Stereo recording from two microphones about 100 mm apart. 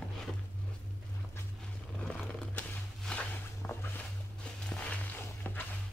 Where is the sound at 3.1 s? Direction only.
15° left (ahead or behind).